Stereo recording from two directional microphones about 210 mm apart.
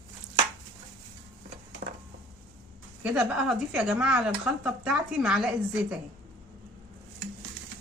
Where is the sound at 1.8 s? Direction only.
40° right (ahead or behind).